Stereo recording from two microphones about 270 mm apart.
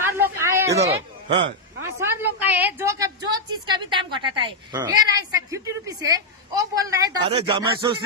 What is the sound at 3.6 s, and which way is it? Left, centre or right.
Speech, centre.